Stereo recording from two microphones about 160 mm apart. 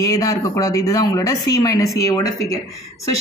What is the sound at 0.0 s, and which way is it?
A man's voice, 20° left (ahead or behind).